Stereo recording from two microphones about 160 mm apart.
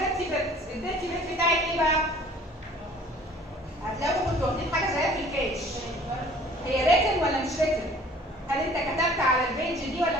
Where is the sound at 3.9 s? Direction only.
Centre (ahead or behind).